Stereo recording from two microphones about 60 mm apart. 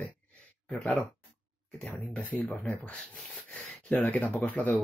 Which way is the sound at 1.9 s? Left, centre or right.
Left.